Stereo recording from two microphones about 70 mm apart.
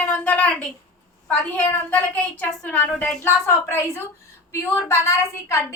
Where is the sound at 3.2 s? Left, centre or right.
Left.